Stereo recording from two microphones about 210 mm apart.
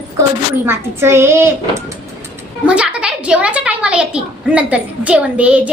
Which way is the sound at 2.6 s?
5° right (ahead or behind).